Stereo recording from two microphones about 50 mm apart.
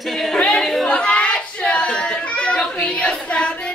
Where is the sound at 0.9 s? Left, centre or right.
Left.